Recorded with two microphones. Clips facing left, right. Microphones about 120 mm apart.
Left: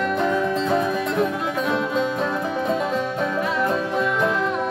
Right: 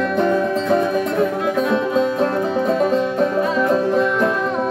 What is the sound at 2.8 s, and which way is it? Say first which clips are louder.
Music: right 6 dB; 40° right (ahead or behind).